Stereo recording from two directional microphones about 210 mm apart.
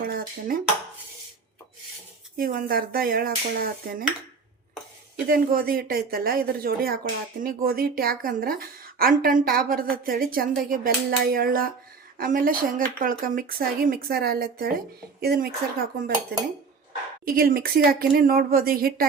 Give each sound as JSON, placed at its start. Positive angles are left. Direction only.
{"t": 0.1, "sound": "dishes", "side_deg": -45}
{"t": 2.4, "sound": "speech", "side_deg": -45}
{"t": 5.3, "sound": "speech", "side_deg": -45}
{"t": 17.2, "sound": "speech", "side_deg": -45}